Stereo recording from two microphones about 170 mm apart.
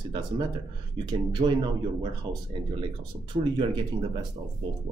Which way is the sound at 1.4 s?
35° right (ahead or behind).